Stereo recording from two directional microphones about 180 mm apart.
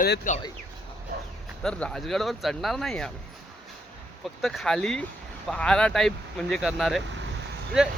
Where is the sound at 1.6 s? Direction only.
5° left (ahead or behind).